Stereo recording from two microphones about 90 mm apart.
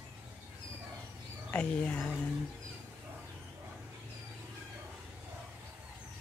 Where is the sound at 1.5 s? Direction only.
15° left (ahead or behind).